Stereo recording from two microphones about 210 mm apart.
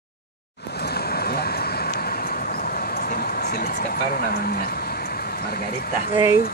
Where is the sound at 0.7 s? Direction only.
50° left (ahead or behind).